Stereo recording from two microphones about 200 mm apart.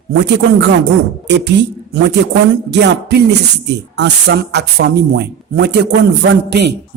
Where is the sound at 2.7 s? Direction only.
60° right (ahead or behind).